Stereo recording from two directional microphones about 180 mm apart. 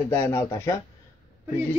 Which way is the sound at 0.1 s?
15° left (ahead or behind).